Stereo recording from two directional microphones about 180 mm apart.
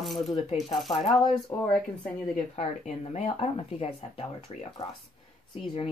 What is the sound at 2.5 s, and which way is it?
Speech, 40° left (ahead or behind).